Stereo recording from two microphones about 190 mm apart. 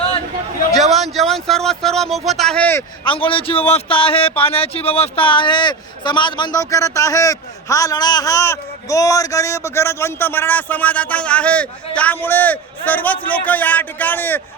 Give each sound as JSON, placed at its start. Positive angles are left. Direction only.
{"t": 0.7, "sound": "speech", "side_deg": 0}
{"t": 3.0, "sound": "speech", "side_deg": 25}